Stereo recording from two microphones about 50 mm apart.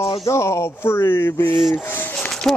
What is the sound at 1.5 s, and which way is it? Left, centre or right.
Rub, centre.